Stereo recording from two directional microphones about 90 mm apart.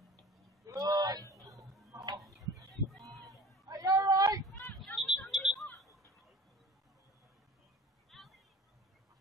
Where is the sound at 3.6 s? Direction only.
45° right (ahead or behind).